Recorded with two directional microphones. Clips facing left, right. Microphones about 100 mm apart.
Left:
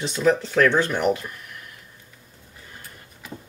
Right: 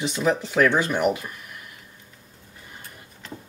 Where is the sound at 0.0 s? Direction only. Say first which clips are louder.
Left 2 dB; 10° right (ahead or behind).